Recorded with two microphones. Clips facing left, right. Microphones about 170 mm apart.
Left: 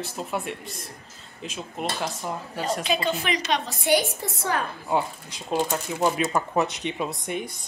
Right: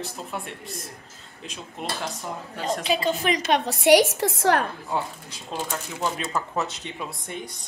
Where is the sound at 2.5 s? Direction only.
5° left (ahead or behind).